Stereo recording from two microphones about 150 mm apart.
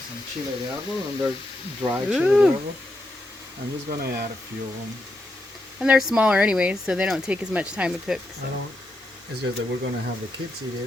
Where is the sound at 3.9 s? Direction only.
85° right.